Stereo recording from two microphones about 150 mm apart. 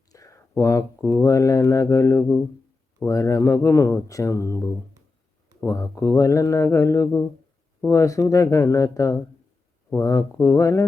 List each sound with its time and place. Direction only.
0.1 s speech: 20° left (ahead or behind)